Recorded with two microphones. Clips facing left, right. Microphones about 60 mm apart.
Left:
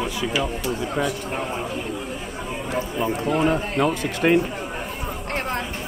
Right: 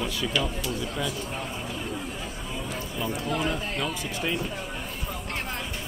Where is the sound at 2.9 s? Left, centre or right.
Left.